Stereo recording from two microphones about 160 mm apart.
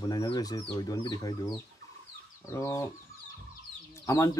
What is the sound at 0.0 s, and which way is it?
Speech, 25° left (ahead or behind).